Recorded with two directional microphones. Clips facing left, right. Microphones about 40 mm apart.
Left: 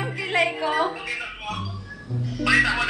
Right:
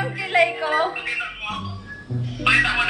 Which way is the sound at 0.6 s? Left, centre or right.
Right.